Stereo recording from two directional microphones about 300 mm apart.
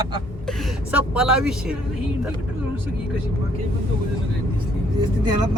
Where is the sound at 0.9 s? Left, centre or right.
Centre.